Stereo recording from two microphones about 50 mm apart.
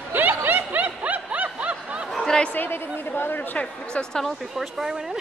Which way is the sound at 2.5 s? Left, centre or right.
Left.